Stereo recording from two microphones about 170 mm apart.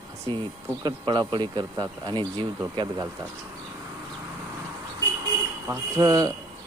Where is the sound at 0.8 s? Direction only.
25° right (ahead or behind).